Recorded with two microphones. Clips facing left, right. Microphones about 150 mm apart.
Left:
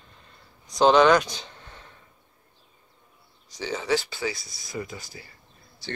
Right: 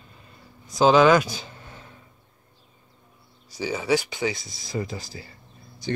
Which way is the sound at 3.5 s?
10° right (ahead or behind).